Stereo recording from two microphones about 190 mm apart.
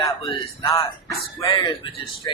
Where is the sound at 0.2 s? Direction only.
25° left (ahead or behind).